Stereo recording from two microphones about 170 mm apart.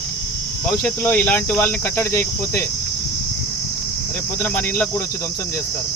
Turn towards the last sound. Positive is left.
turn(degrees=10)  # may be behind; listen again after turning